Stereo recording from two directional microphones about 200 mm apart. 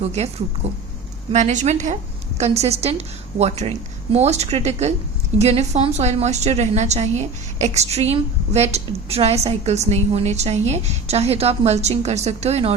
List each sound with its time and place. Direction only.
0.0 s a woman's voice: 30° right (ahead or behind)